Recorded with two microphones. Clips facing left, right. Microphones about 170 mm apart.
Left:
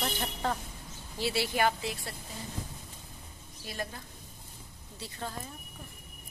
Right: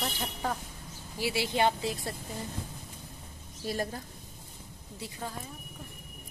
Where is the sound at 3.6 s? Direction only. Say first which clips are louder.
Right 6 dB; 40° right (ahead or behind).